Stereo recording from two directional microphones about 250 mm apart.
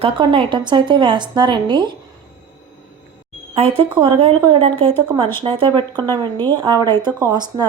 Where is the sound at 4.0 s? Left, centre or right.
Right.